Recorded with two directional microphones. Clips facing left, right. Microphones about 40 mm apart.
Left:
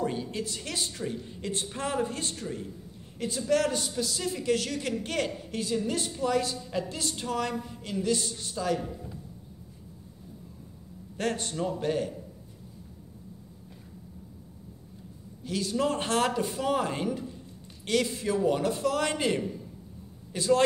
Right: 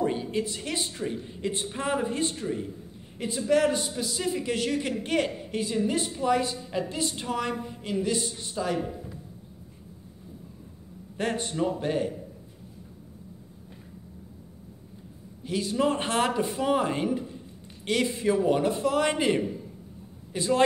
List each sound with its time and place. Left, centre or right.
0.0 s a man's voice: centre
11.1 s a man's voice: right
15.4 s a man's voice: right